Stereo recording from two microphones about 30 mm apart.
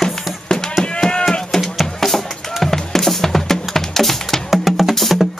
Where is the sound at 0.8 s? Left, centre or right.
Left.